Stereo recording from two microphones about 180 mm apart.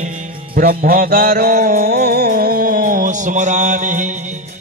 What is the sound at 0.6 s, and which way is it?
Music, 50° right (ahead or behind).